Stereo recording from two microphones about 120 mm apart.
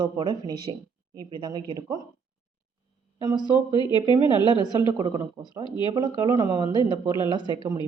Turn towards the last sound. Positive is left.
turn(degrees=-35)  # may be behind; listen again after turning